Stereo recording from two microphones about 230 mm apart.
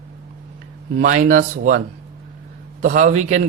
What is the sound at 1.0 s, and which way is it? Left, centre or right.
Speech, right.